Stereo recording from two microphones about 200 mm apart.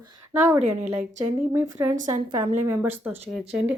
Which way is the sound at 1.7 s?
15° right (ahead or behind).